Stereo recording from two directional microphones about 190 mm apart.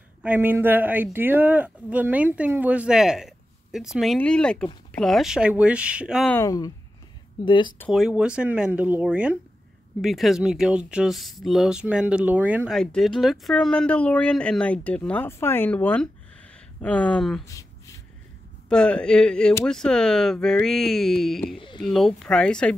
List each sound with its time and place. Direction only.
0.2 s speech: 10° right (ahead or behind)
6.3 s speech: 20° left (ahead or behind)
7.9 s speech: 5° right (ahead or behind)
17.5 s a sound: 15° left (ahead or behind)
18.7 s speech: 5° left (ahead or behind)
21.5 s speech: 25° left (ahead or behind)
21.8 s speech: centre (ahead or behind)